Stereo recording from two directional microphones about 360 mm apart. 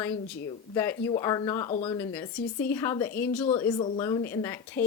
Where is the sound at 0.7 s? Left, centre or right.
Centre.